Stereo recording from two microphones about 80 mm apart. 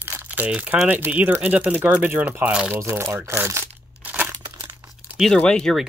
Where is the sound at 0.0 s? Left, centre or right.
Right.